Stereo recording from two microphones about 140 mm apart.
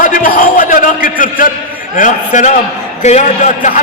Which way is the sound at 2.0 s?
60° left (ahead or behind).